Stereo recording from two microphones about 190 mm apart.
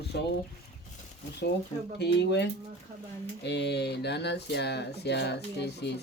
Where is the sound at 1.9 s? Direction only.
65° left (ahead or behind).